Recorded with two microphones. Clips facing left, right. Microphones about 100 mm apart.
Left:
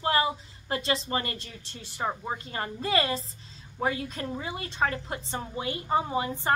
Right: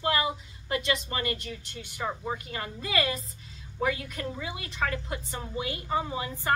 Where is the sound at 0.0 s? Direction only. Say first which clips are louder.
Left 2 dB; 35° left (ahead or behind).